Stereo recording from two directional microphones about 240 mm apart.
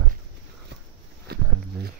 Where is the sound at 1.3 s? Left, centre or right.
Right.